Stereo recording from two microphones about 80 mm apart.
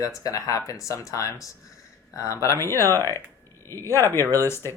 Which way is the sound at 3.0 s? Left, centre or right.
Right.